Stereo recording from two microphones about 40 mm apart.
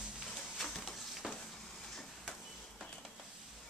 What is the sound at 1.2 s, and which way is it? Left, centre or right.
Frying, centre.